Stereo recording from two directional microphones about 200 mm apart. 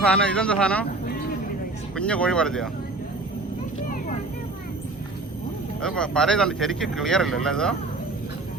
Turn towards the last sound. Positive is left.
turn(degrees=5)  # may be behind; listen again after turning